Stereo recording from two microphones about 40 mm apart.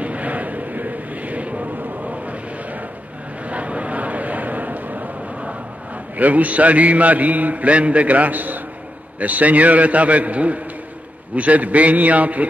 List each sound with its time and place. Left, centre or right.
0.0 s vehicle: right
6.1 s a man's voice: right